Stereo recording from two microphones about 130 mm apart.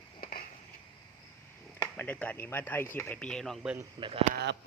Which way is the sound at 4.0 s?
45° right (ahead or behind).